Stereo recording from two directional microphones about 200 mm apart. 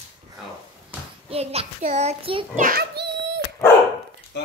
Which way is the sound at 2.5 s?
45° right (ahead or behind).